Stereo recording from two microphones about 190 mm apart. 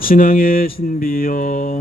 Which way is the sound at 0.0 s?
50° left (ahead or behind).